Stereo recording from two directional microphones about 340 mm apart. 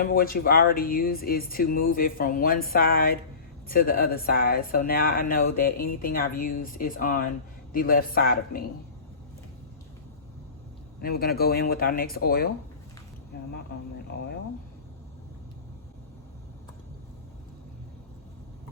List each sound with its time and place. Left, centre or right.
0.0 s speech: left
11.0 s speech: left
13.3 s a sound: left